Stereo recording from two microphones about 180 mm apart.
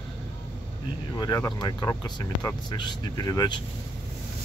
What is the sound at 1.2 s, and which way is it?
Speech, 20° left (ahead or behind).